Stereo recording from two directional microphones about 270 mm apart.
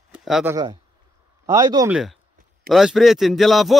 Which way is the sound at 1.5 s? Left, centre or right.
Centre.